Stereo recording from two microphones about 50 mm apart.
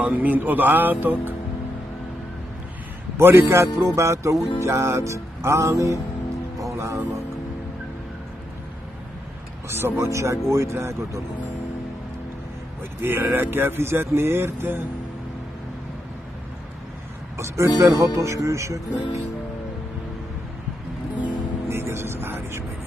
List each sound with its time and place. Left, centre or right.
0.0 s speech: right
3.2 s speech: right
3.4 s speech: right
6.7 s music: right
9.7 s speech: right
13.0 s speech: right
17.4 s speech: right
21.6 s music: right